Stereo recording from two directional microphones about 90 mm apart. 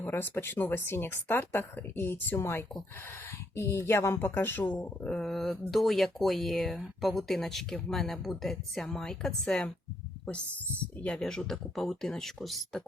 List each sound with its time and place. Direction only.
0.0 s speech: 20° left (ahead or behind)
4.9 s speech: 10° left (ahead or behind)
10.9 s speech: 10° left (ahead or behind)